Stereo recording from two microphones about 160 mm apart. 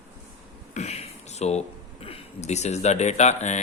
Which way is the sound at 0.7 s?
45° left (ahead or behind).